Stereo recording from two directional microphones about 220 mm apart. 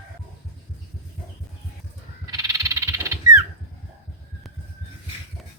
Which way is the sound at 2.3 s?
15° right (ahead or behind).